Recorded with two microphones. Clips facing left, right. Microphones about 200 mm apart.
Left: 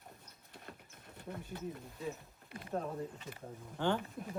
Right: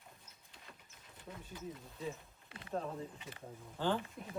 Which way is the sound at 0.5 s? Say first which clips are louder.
Left 7 dB; 55° left (ahead or behind).